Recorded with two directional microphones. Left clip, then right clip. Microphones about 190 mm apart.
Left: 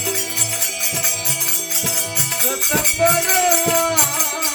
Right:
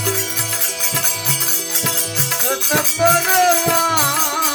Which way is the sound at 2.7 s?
45° right (ahead or behind).